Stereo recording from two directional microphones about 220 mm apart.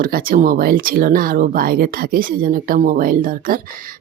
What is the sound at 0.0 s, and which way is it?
A woman's voice, 40° right (ahead or behind).